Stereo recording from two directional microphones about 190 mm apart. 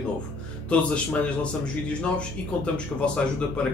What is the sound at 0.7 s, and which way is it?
A man's voice, 5° left (ahead or behind).